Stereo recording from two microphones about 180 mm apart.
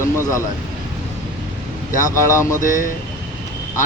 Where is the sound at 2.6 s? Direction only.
45° left (ahead or behind).